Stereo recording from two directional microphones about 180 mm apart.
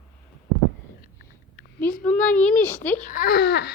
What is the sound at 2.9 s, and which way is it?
Speech, 45° left (ahead or behind).